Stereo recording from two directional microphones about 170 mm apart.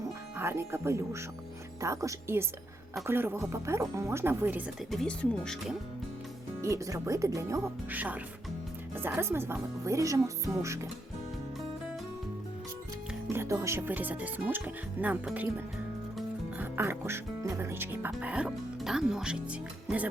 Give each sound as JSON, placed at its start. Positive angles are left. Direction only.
{"t": 0.3, "sound": "speech", "side_deg": -15}
{"t": 4.9, "sound": "speech", "side_deg": 5}
{"t": 6.6, "sound": "speech", "side_deg": -20}
{"t": 13.3, "sound": "speech", "side_deg": -15}